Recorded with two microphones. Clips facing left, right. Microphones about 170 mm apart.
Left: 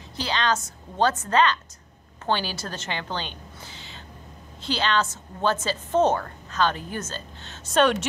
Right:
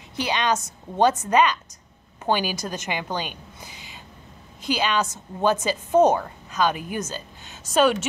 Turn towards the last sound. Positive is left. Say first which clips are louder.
# right 1 dB
turn(degrees=-5)  # may be behind; listen again after turning